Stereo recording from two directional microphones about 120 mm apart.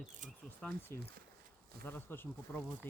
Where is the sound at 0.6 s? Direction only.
10° left (ahead or behind).